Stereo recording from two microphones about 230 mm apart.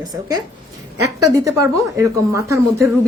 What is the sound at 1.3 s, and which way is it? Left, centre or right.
A woman's voice, centre.